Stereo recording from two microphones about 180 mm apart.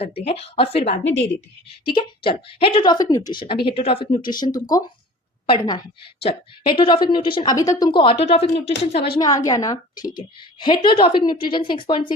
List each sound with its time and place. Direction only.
0.0 s a woman's voice: 35° left (ahead or behind)
9.1 s a woman's voice: 20° left (ahead or behind)